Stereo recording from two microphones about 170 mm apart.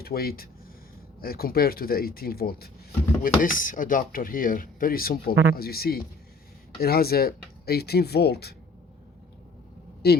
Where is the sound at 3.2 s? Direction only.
50° left (ahead or behind); by 8.5 s 70° left (ahead or behind).